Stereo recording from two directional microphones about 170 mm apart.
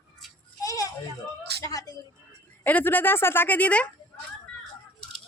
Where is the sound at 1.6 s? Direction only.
20° left (ahead or behind).